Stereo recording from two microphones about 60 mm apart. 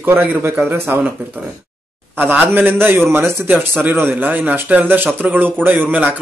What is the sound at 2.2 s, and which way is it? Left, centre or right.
Speech, right.